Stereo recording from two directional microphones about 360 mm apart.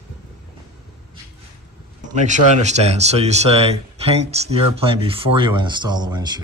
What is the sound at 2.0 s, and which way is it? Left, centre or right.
Speech, centre.